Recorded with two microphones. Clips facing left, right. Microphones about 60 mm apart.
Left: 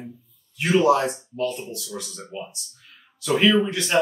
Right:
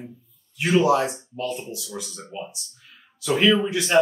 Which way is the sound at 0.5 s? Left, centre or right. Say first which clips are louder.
Left 1 dB; centre.